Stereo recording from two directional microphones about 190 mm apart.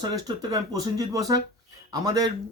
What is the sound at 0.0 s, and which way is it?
Speech, 20° right (ahead or behind).